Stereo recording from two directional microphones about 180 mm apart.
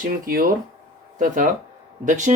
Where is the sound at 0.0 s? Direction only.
55° right (ahead or behind).